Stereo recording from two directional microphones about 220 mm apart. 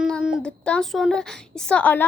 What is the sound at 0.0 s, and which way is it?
A woman's voice, 5° right (ahead or behind).